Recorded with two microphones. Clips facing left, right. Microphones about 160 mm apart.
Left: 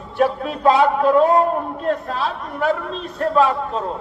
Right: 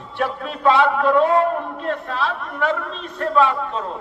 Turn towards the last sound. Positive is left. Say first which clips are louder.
# left 1 dB
turn(degrees=40)  # may be behind; listen again after turning